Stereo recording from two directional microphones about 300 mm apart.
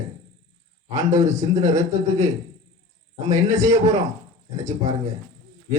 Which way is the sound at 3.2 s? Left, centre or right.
Centre.